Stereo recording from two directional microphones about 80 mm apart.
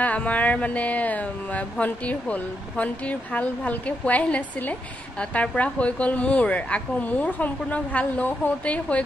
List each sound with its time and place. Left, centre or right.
0.0 s speech: centre